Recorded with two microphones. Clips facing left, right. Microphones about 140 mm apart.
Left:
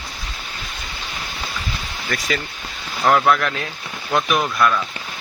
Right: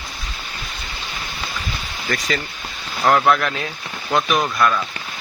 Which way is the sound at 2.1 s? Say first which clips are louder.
Right 1 dB; 5° left (ahead or behind).